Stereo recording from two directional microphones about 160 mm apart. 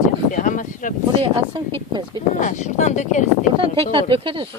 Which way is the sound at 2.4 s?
50° left (ahead or behind).